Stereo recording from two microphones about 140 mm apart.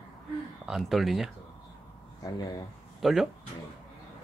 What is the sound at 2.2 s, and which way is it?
Speech, 30° left (ahead or behind).